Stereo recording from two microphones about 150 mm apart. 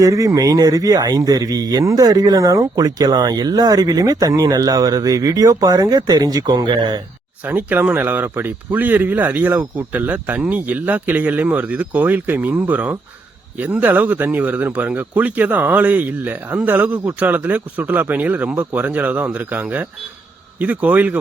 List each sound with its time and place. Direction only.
0.0 s speech: 20° right (ahead or behind)
7.4 s speech: 15° right (ahead or behind)